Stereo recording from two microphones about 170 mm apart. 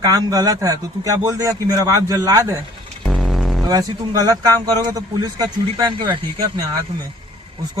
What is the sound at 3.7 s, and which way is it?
A man's voice, 20° right (ahead or behind).